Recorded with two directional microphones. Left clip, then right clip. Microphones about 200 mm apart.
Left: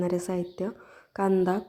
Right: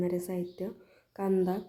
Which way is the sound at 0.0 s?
20° left (ahead or behind).